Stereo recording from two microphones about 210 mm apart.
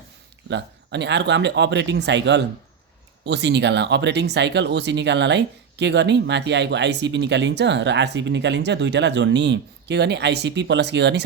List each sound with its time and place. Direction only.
0.5 s speech: 55° right (ahead or behind)